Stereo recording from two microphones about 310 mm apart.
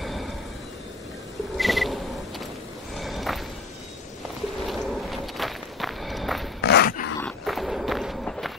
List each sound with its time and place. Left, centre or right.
0.0 s vehicle: centre
1.6 s a sound: centre
3.0 s music: centre
4.6 s walk: centre
6.6 s dog: left
7.2 s walk: centre